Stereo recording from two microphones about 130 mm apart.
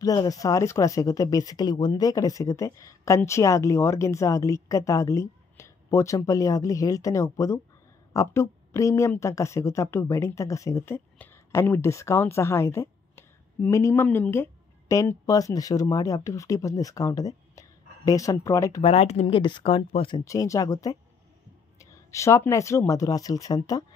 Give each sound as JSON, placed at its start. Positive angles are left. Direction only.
{"t": 0.0, "sound": "a woman's voice", "side_deg": 30}
{"t": 18.8, "sound": "speech", "side_deg": 50}
{"t": 20.2, "sound": "a woman's voice", "side_deg": 25}